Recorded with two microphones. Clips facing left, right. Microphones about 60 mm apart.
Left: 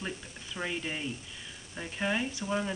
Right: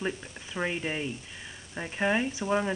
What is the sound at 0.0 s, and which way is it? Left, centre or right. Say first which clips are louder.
Speech: right 6 dB; right.